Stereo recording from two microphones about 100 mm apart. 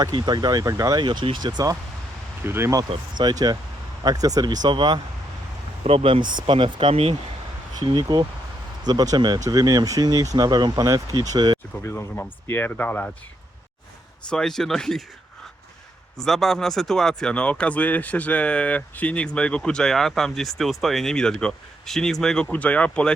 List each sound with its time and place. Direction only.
0.0 s speech: 45° right (ahead or behind)
1.0 s speech: 55° right (ahead or behind)
2.4 s speech: 25° right (ahead or behind)
3.2 s speech: 45° right (ahead or behind)
5.8 s speech: 75° right (ahead or behind)
7.8 s speech: 45° right (ahead or behind)
11.8 s speech: 25° left (ahead or behind)
14.3 s speech: 5° left (ahead or behind)
16.1 s speech: 5° left (ahead or behind)